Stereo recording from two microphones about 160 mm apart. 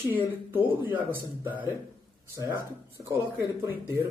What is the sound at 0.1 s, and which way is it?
Speech, 10° right (ahead or behind).